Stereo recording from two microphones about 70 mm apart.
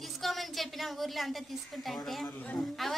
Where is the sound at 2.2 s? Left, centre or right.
Left.